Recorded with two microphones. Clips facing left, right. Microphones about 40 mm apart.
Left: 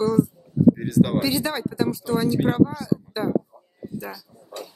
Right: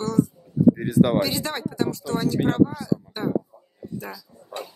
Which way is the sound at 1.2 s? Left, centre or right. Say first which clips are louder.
Left 1 dB; centre.